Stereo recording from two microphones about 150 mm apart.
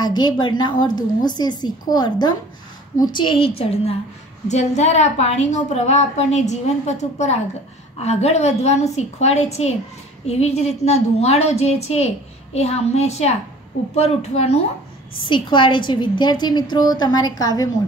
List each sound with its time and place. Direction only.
0.0 s a woman's voice: 30° left (ahead or behind); by 14.6 s 45° left (ahead or behind)
15.2 s a woman's voice: 30° left (ahead or behind)